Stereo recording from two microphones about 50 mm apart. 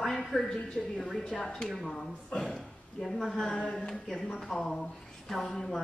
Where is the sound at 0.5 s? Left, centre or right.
Left; by 3.2 s centre.